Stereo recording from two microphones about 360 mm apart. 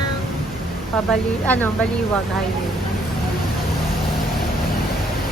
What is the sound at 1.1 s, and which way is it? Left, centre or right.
Speech, centre.